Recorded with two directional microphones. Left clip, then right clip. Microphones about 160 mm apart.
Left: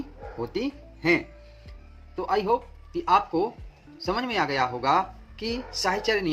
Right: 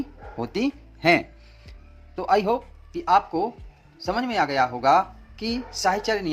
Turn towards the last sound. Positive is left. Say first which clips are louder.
# right 2 dB
turn(degrees=-25)  # may be behind; listen again after turning